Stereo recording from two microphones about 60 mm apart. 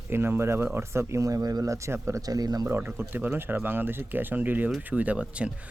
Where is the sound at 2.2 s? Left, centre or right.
Right.